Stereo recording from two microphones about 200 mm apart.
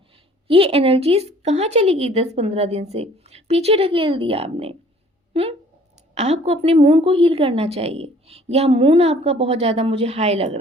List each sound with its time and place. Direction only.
0.4 s a woman's voice: 30° right (ahead or behind)